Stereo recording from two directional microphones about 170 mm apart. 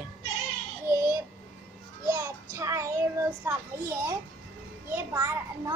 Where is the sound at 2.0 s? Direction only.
15° right (ahead or behind).